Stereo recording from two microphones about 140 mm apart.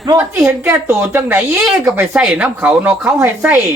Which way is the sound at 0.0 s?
25° right (ahead or behind).